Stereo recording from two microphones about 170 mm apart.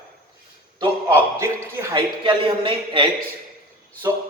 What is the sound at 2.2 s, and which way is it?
Speech, 30° right (ahead or behind).